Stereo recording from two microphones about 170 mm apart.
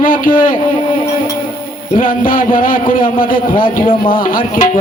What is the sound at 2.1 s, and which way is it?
A man's voice, 55° left (ahead or behind).